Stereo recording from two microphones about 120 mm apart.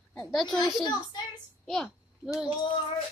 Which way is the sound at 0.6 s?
35° left (ahead or behind).